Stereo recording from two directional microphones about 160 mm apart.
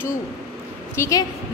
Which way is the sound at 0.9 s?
15° left (ahead or behind).